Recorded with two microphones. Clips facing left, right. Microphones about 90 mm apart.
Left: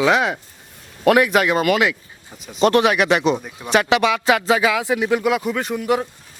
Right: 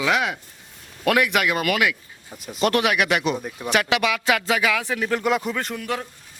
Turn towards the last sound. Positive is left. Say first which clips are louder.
# left 7 dB
turn(degrees=20)  # may be behind; listen again after turning